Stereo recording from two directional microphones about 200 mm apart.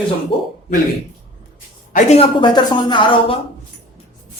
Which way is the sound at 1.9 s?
35° left (ahead or behind).